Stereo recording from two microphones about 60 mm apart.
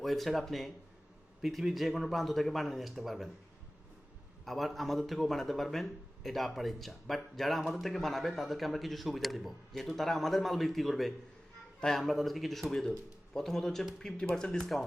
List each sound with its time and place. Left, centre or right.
0.0 s speech: centre
4.4 s speech: centre
14.6 s speech: centre